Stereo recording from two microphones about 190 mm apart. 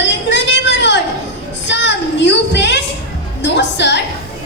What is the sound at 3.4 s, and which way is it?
Music, 65° left (ahead or behind).